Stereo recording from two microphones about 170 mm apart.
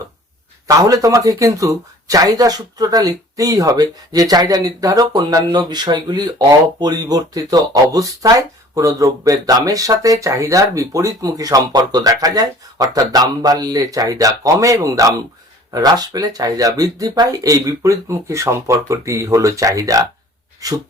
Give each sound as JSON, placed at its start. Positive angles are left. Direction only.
{"t": 0.9, "sound": "speech", "side_deg": -20}